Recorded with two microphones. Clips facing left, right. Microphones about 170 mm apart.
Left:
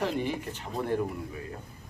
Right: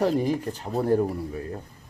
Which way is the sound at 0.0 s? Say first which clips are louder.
Right 7 dB; 40° right (ahead or behind).